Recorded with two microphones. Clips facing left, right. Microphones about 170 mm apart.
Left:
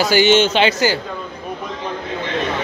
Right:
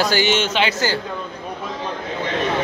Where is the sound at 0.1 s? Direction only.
25° left (ahead or behind).